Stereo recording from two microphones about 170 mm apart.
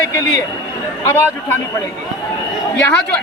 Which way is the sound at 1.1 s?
15° left (ahead or behind).